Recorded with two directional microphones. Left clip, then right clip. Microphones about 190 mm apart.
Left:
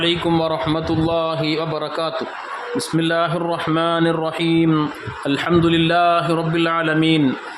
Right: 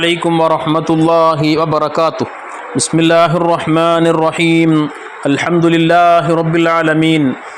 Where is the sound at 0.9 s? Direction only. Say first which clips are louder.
Right 12 dB; 25° right (ahead or behind).